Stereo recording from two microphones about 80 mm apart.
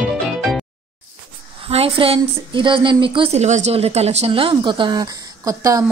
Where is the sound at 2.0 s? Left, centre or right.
Right.